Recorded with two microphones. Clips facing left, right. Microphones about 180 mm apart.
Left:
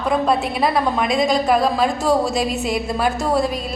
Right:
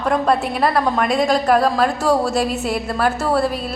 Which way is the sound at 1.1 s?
10° right (ahead or behind).